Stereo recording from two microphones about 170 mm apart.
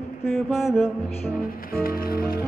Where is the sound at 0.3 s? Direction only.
Centre (ahead or behind).